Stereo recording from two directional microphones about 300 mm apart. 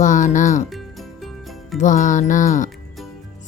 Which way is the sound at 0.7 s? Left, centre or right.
Centre.